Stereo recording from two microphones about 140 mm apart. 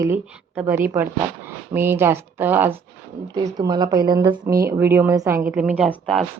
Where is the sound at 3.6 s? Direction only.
30° right (ahead or behind).